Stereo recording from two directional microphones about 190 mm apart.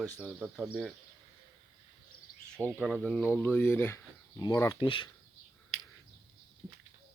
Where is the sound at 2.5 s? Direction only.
5° left (ahead or behind); by 5.0 s 25° left (ahead or behind).